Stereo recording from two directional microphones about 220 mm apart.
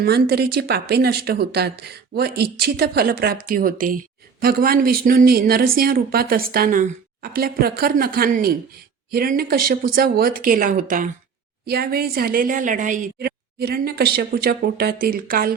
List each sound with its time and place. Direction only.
0.0 s speech: 45° right (ahead or behind)